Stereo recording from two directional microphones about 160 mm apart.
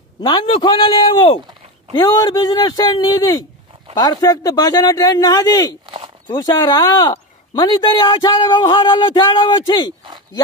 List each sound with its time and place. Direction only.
0.2 s speech: 30° left (ahead or behind)